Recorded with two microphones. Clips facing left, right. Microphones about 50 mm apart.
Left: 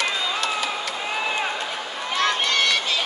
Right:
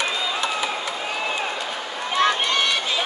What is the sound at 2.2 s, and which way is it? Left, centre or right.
Run, centre.